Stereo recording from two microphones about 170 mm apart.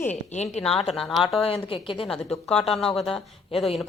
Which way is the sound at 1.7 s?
30° left (ahead or behind).